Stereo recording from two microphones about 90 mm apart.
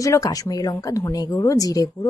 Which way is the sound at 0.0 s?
40° left (ahead or behind).